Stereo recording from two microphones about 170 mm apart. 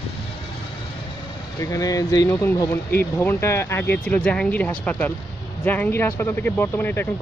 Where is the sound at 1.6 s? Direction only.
20° left (ahead or behind).